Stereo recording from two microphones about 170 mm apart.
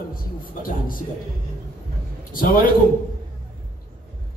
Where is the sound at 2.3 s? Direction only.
60° left (ahead or behind).